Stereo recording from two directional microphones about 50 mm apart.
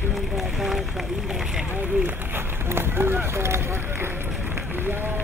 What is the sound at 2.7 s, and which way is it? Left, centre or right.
Speech, right.